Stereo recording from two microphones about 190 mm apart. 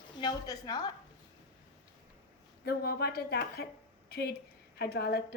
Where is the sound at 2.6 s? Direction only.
55° left (ahead or behind).